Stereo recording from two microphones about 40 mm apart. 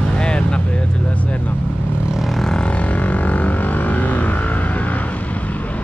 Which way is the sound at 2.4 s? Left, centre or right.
Left.